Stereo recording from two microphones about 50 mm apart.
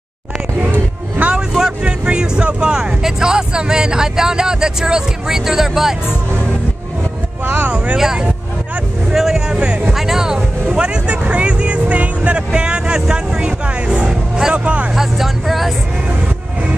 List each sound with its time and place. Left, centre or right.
0.6 s music: right
1.8 s speech: right
7.4 s vehicle: right
7.7 s vehicle: right
9.1 s a sound: centre
9.9 s music: centre
10.8 s vehicle: centre
11.2 s music: right
13.1 s speech: centre
15.0 s speech: centre